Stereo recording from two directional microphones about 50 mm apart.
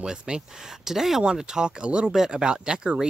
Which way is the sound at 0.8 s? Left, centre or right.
Centre.